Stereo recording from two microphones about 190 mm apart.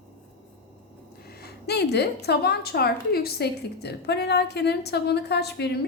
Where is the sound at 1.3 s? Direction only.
60° left (ahead or behind).